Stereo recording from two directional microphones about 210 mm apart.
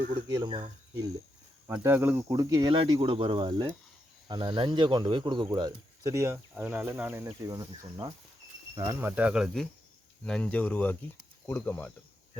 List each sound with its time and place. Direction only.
0.1 s speech: 20° right (ahead or behind)
1.6 s speech: 10° right (ahead or behind); by 11.9 s 10° left (ahead or behind)